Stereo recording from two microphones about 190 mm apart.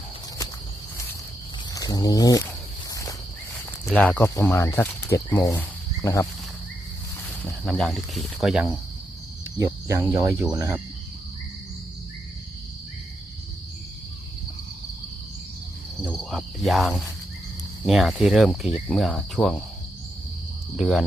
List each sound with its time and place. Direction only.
1.7 s speech: 20° left (ahead or behind)
2.9 s cricket: 15° left (ahead or behind)
3.8 s speech: 5° left (ahead or behind)
7.4 s speech: 5° left (ahead or behind)
9.6 s cricket: 15° right (ahead or behind)
16.0 s cricket: centre (ahead or behind)
17.8 s speech: centre (ahead or behind)
20.7 s speech: centre (ahead or behind)